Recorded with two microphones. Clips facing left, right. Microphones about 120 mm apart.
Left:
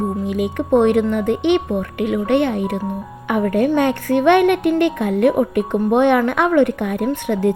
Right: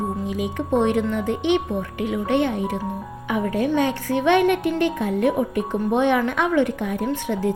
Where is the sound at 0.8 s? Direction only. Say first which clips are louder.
Left 5 dB; 60° left (ahead or behind).